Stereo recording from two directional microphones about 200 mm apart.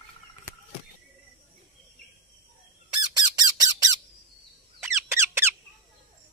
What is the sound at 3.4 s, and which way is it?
Squawk, 20° right (ahead or behind).